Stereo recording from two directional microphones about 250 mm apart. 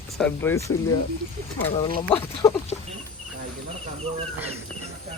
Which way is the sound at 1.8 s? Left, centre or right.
Centre.